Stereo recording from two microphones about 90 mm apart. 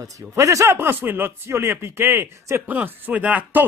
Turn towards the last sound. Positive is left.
turn(degrees=-20)  # may be behind; listen again after turning